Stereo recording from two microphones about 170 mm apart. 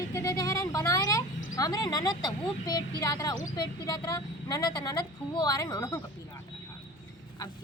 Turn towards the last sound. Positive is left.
turn(degrees=20)  # may be behind; listen again after turning